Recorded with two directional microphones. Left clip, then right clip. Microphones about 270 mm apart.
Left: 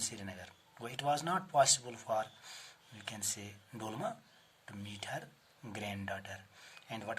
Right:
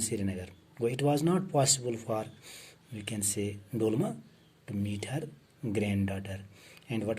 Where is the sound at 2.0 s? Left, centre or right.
Left.